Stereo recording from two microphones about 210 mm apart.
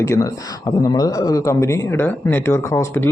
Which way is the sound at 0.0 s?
15° left (ahead or behind).